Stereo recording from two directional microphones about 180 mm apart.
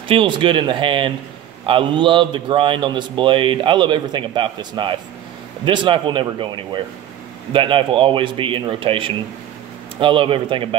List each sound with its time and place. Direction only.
0.1 s speech: 30° right (ahead or behind)